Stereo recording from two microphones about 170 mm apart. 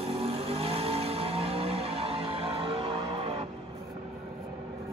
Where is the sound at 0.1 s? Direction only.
35° right (ahead or behind).